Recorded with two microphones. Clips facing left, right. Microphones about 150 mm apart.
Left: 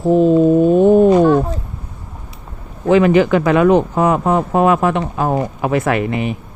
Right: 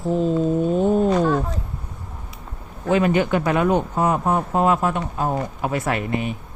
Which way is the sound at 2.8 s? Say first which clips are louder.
Left 7 dB; 90° left.